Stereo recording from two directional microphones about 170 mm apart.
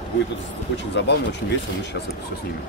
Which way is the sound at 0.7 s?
90° left.